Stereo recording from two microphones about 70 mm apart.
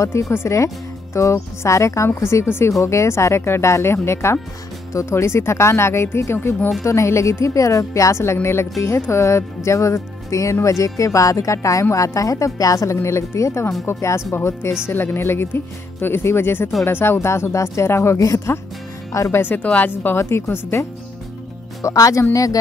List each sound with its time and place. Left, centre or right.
0.0 s speech: left
12.9 s speech: left
19.4 s speech: left
21.8 s speech: left